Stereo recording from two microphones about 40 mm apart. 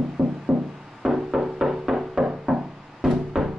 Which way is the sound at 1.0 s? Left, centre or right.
Centre.